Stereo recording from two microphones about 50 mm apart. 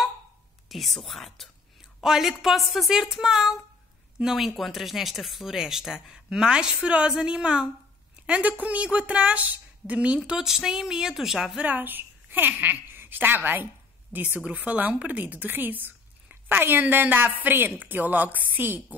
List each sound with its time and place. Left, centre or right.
0.7 s a woman's voice: centre
2.0 s a woman's voice: centre; by 10.3 s right
10.3 s speech: centre
11.5 s a woman's voice: right